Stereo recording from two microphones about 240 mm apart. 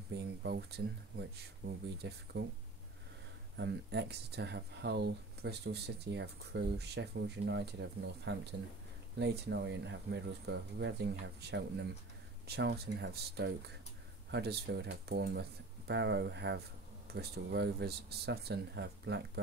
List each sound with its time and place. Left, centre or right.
0.1 s speech: right
1.6 s speech: right
3.5 s speech: right